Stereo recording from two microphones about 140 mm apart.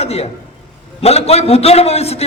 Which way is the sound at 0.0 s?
45° left (ahead or behind).